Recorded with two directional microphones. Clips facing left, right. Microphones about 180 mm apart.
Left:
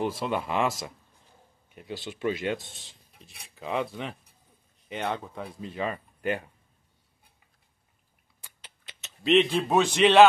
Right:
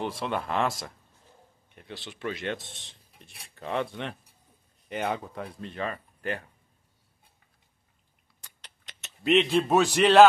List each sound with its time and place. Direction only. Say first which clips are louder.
0.0 s speech: left 2 dB; 5° left (ahead or behind)
5.8 s speech: left 2 dB; 15° left (ahead or behind)
8.6 s speech: left 1 dB; centre (ahead or behind)